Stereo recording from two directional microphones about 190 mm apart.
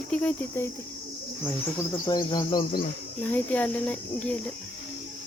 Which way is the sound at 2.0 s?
20° left (ahead or behind).